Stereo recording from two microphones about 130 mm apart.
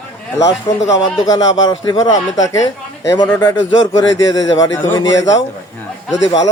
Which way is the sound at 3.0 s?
25° left (ahead or behind).